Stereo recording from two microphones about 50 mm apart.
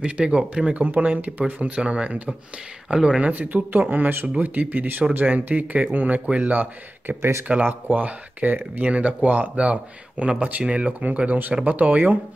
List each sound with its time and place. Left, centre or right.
0.0 s speech: right
2.9 s speech: centre
3.2 s speech: right
6.2 s speech: right
6.5 s speech: right
7.2 s speech: right
7.4 s speech: right